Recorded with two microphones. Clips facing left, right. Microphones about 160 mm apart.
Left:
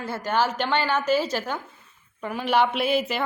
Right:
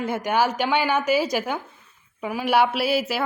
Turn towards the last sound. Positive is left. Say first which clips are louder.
# right 1 dB
turn(degrees=-5)  # may be behind; listen again after turning